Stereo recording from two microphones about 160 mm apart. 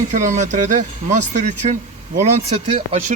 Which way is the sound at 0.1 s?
50° right (ahead or behind).